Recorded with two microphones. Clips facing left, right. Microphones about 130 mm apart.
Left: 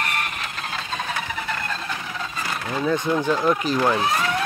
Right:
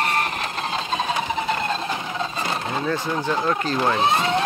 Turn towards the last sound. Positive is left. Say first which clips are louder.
# right 2 dB
turn(degrees=-25)  # may be behind; listen again after turning